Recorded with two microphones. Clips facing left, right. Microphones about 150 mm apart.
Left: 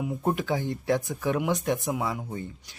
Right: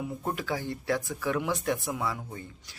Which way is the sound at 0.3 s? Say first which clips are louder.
Left 6 dB; 20° left (ahead or behind).